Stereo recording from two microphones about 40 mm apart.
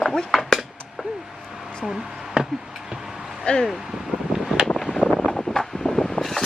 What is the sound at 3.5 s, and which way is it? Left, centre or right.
Speech, left.